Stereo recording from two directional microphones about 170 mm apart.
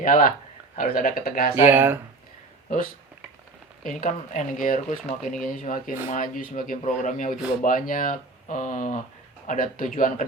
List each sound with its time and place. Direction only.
0.0 s speech: 55° left (ahead or behind)
1.6 s speech: 10° right (ahead or behind)
3.8 s speech: 50° left (ahead or behind)